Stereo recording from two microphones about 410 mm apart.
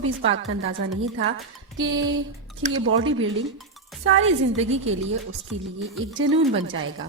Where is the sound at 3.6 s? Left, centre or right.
Centre.